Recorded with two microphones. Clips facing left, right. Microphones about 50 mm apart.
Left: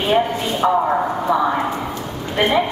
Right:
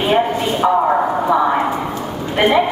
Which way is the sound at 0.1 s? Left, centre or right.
Centre.